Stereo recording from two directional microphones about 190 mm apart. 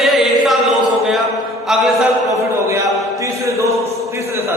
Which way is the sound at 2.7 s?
15° right (ahead or behind).